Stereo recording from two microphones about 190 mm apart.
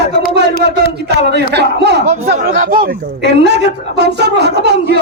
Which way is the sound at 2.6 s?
50° right (ahead or behind).